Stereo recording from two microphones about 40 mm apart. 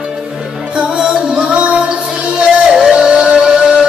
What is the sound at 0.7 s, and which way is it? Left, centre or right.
Music, right.